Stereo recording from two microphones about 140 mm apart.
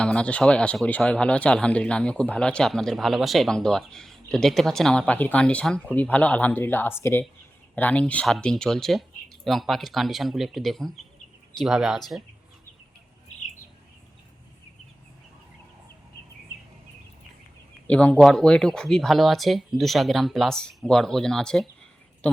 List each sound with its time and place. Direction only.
0.0 s speech: 10° left (ahead or behind)
17.8 s speech: 10° left (ahead or behind)